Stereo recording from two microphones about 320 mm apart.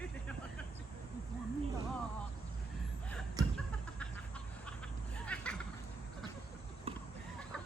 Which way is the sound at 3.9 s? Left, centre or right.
Centre.